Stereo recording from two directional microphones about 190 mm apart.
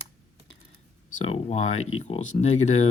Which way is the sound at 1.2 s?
35° left (ahead or behind).